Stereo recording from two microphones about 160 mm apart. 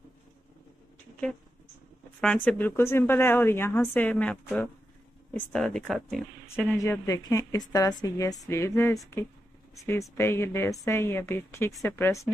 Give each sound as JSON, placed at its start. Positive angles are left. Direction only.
{"t": 2.2, "sound": "a woman's voice", "side_deg": 10}
{"t": 6.4, "sound": "a woman's voice", "side_deg": 15}